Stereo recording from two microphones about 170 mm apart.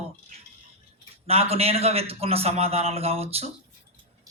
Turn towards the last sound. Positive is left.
turn(degrees=-35)  # may be behind; listen again after turning